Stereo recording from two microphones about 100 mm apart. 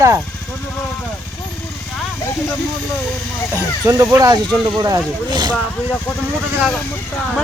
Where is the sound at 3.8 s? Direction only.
35° right (ahead or behind).